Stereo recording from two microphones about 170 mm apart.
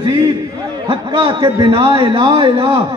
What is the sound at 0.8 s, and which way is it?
A man's voice, 30° right (ahead or behind).